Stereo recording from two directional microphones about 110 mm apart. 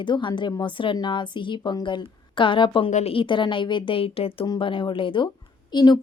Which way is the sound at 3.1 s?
50° left (ahead or behind).